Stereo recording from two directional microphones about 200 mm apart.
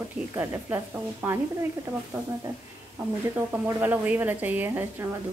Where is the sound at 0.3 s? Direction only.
10° right (ahead or behind).